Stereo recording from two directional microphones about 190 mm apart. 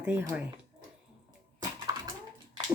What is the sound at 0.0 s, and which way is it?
Speech, 10° right (ahead or behind).